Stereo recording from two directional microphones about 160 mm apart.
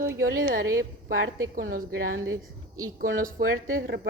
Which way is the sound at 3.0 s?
65° right (ahead or behind).